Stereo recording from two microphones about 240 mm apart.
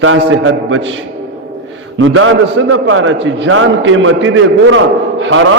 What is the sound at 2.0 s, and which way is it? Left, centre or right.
A man's voice, right.